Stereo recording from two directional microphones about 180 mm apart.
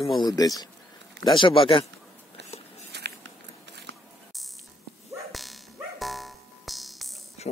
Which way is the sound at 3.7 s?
75° right (ahead or behind).